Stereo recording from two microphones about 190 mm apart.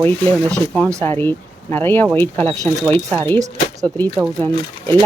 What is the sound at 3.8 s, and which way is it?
Speech, 10° left (ahead or behind).